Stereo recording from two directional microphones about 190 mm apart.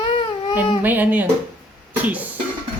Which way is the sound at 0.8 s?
10° right (ahead or behind).